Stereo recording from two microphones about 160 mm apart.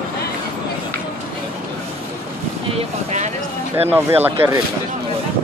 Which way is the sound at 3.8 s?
15° right (ahead or behind).